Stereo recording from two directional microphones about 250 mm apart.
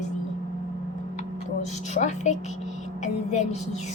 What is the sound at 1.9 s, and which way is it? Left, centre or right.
Music, left.